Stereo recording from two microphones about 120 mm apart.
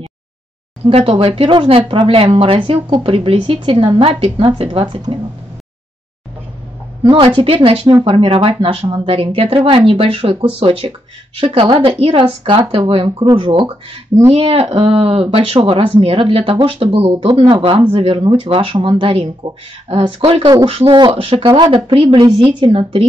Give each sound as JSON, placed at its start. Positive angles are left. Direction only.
{"t": 0.8, "sound": "speech", "side_deg": -55}
{"t": 7.0, "sound": "a woman's voice", "side_deg": -45}